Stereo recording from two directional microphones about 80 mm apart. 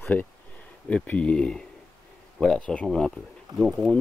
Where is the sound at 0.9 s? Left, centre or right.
Centre.